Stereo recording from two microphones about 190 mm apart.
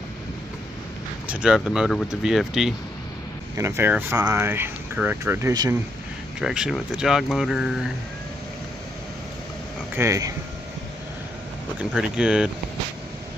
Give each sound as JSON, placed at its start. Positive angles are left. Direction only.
{"t": 1.2, "sound": "speech", "side_deg": -5}
{"t": 3.5, "sound": "speech", "side_deg": -15}
{"t": 6.4, "sound": "speech", "side_deg": -5}
{"t": 9.9, "sound": "speech", "side_deg": -15}
{"t": 11.9, "sound": "speech", "side_deg": -5}